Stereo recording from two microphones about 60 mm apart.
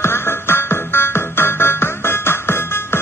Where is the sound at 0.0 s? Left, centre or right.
Left.